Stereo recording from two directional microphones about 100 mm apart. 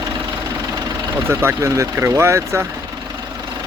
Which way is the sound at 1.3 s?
25° right (ahead or behind).